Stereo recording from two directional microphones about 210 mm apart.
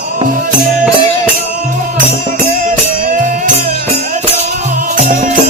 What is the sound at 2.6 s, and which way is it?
Music, 40° right (ahead or behind).